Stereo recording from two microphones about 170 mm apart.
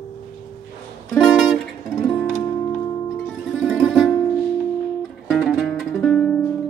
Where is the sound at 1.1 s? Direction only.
Centre (ahead or behind).